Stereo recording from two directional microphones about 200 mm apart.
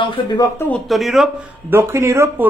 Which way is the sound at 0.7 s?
Centre (ahead or behind).